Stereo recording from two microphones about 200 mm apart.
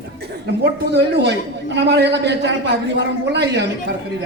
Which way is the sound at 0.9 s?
55° right (ahead or behind).